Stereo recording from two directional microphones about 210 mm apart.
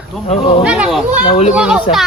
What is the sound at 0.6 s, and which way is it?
Speech, 5° right (ahead or behind).